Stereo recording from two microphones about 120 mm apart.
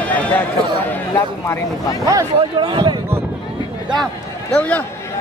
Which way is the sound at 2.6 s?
40° right (ahead or behind).